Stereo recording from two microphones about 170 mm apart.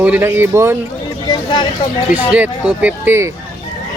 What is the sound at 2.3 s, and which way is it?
Speech, 10° right (ahead or behind).